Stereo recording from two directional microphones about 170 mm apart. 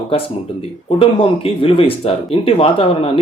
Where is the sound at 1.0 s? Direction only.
35° left (ahead or behind).